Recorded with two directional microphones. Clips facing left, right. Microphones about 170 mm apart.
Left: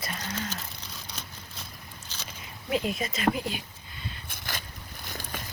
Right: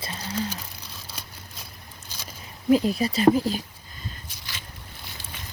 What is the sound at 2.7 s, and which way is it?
Speech, 35° right (ahead or behind).